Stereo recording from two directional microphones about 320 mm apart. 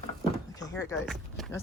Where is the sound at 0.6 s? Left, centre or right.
Centre.